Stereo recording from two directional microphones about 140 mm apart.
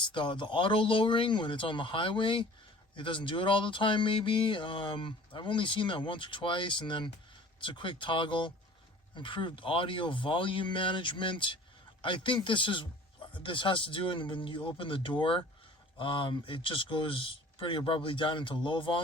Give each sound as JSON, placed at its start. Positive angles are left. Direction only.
{"t": 0.0, "sound": "speech", "side_deg": 35}